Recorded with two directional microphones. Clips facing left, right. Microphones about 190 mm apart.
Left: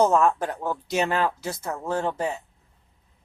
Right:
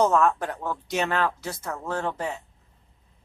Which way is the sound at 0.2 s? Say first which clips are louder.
Left 1 dB; 10° left (ahead or behind).